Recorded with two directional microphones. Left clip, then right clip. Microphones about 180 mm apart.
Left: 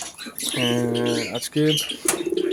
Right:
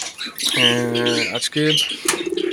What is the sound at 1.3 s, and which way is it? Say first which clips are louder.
Speech: right 3 dB; 15° left (ahead or behind).